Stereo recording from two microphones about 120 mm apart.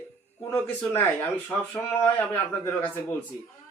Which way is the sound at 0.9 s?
15° left (ahead or behind).